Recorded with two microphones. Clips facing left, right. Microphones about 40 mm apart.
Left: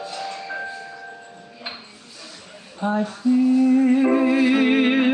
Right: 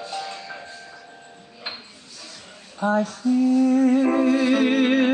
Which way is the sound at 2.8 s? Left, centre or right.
Centre.